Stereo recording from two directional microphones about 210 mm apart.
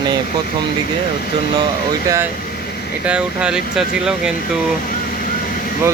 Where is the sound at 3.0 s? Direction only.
5° right (ahead or behind).